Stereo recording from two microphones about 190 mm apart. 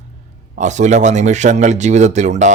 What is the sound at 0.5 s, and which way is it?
Speech, 40° right (ahead or behind).